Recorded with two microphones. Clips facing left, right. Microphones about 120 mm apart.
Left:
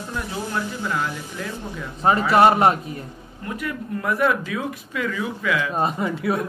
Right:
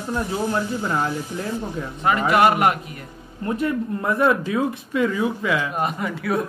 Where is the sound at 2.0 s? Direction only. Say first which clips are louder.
Left 2 dB; 30° left (ahead or behind).